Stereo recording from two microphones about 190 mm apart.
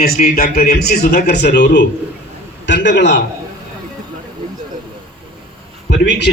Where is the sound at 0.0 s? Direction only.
50° left (ahead or behind).